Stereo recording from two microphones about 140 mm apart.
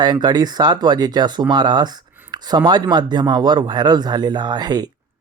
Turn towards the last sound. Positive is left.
turn(degrees=-30)  # may be behind; listen again after turning